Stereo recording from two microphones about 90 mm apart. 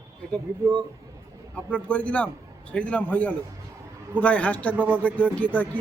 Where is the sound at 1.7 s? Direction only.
15° left (ahead or behind).